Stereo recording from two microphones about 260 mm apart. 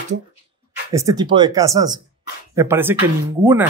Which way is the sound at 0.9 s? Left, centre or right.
Centre.